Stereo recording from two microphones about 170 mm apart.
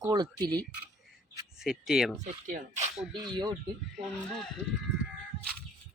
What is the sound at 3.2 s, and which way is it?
Speech, 25° right (ahead or behind).